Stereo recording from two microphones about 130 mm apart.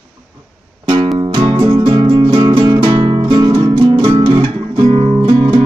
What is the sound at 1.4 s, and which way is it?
Music, 35° right (ahead or behind).